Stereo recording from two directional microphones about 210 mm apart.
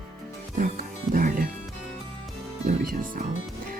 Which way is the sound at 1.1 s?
40° right (ahead or behind).